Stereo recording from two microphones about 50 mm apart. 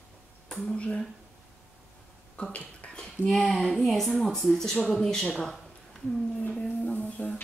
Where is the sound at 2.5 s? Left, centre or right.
Left.